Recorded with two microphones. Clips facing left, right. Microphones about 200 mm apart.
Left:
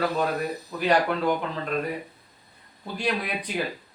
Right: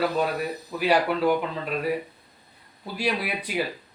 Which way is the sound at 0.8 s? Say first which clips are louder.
Right 1 dB; 5° right (ahead or behind).